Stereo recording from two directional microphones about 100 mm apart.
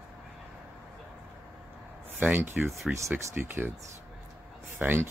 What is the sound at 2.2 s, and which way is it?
Speech, 20° right (ahead or behind).